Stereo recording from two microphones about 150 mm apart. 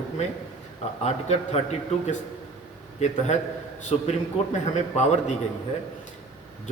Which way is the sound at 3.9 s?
40° left (ahead or behind).